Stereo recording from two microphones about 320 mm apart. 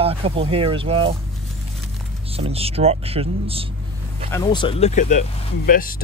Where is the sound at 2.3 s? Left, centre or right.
Centre.